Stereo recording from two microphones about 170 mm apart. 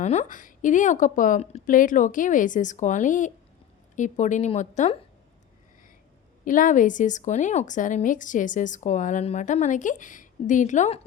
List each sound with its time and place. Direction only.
0.0 s a woman's voice: 40° left (ahead or behind)
6.4 s a woman's voice: 50° left (ahead or behind)